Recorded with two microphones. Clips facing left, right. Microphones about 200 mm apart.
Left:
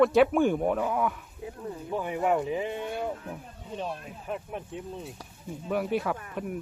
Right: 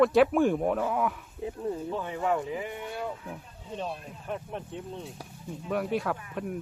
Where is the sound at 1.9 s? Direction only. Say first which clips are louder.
Left 5 dB; 15° left (ahead or behind).